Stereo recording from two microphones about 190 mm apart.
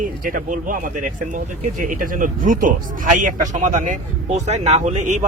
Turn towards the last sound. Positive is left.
turn(degrees=-40)  # may be behind; listen again after turning